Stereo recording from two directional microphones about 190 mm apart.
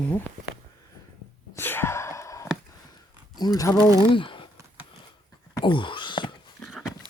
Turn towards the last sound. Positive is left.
turn(degrees=0)  # may be behind; listen again after turning